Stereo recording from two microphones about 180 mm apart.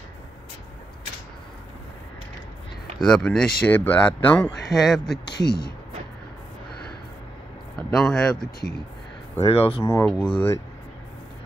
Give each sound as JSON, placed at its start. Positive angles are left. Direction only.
{"t": 3.0, "sound": "speech", "side_deg": 5}
{"t": 5.4, "sound": "speech", "side_deg": 25}
{"t": 7.9, "sound": "speech", "side_deg": 5}
{"t": 9.4, "sound": "speech", "side_deg": 35}
{"t": 9.8, "sound": "speech", "side_deg": 15}